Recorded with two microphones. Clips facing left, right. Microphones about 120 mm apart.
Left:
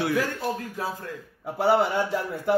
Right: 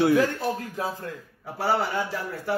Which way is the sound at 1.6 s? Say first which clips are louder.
Left 4 dB; 25° left (ahead or behind).